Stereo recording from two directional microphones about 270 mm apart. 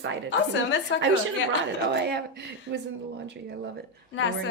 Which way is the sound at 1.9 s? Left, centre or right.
Right.